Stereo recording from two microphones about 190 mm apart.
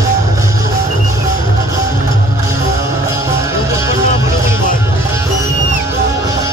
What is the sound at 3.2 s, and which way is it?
Music, 15° right (ahead or behind).